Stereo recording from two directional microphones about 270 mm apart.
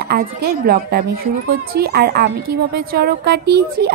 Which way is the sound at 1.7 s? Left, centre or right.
Right.